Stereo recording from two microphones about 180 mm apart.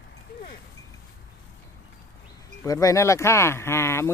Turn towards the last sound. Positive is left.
turn(degrees=15)  # may be behind; listen again after turning